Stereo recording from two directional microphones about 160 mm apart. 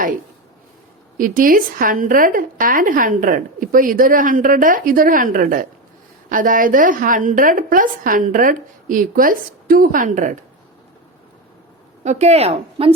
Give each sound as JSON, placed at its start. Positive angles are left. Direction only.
{"t": 1.2, "sound": "a woman's voice", "side_deg": -60}
{"t": 12.0, "sound": "speech", "side_deg": -45}